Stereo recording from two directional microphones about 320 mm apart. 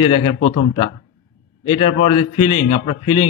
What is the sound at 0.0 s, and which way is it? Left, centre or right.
A man's voice, centre.